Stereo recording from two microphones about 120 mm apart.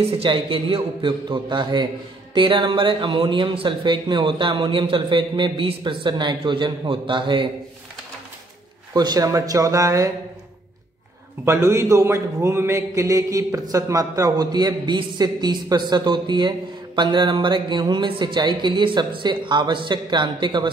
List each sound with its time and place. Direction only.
0.0 s speech: 50° right (ahead or behind)
8.9 s speech: 35° right (ahead or behind)
11.4 s a man's voice: 25° right (ahead or behind); by 20.7 s 45° right (ahead or behind)